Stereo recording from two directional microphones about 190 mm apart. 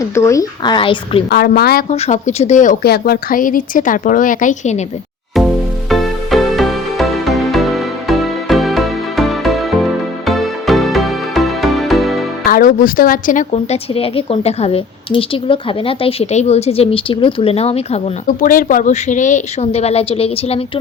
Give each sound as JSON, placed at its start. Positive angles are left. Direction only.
{"t": 0.0, "sound": "a woman's voice", "side_deg": 15}
{"t": 1.3, "sound": "speech", "side_deg": 55}
{"t": 1.9, "sound": "speech", "side_deg": 35}
{"t": 5.9, "sound": "music", "side_deg": 0}
{"t": 12.5, "sound": "a woman's voice", "side_deg": 45}
{"t": 18.3, "sound": "a woman's voice", "side_deg": 45}